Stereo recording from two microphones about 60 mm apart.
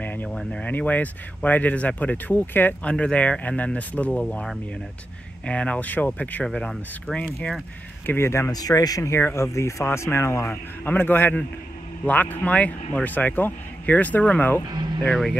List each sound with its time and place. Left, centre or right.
0.0 s a sound: left
0.7 s a man's voice: left
2.8 s a man's voice: centre
4.2 s a man's voice: centre
6.4 s speech: centre
8.1 s speech: left
8.5 s speech: left
9.2 s speech: left
10.4 s a man's voice: left
15.0 s speech: centre